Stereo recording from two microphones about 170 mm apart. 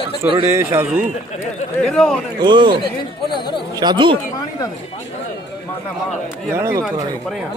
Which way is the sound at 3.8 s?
25° right (ahead or behind).